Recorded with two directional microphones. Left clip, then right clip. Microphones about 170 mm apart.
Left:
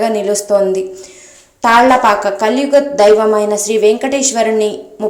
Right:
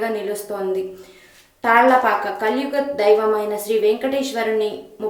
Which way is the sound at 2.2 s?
25° left (ahead or behind).